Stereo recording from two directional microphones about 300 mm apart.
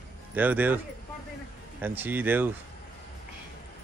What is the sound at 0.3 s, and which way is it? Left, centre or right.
Speech, centre.